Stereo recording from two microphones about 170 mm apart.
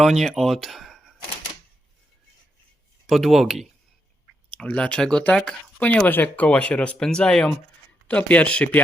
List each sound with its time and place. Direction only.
0.0 s speech: centre (ahead or behind)
3.1 s speech: centre (ahead or behind)